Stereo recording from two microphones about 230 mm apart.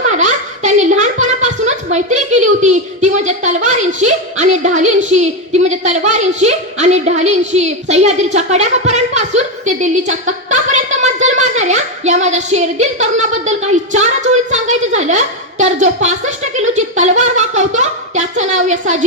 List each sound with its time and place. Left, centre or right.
0.1 s a child's voice: right